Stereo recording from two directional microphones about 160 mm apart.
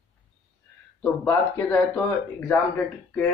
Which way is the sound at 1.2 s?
10° left (ahead or behind).